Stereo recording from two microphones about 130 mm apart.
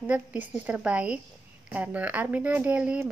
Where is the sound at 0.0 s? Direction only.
10° right (ahead or behind).